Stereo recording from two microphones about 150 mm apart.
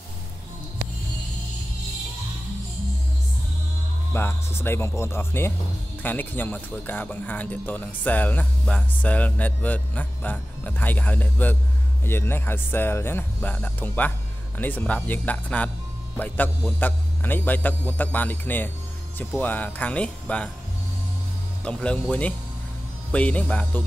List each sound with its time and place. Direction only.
4.1 s speech: 15° left (ahead or behind)
16.8 s speech: 15° left (ahead or behind)
21.6 s speech: 10° left (ahead or behind)
23.1 s speech: 10° left (ahead or behind)